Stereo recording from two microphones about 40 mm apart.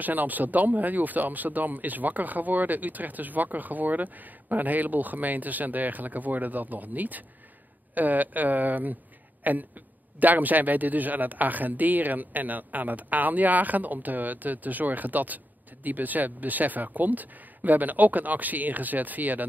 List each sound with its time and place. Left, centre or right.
0.0 s speech: right